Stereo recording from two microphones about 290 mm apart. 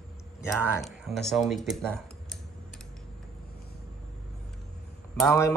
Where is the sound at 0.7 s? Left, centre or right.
Centre.